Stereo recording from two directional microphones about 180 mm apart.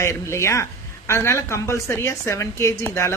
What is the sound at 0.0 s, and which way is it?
A woman's voice, 15° left (ahead or behind).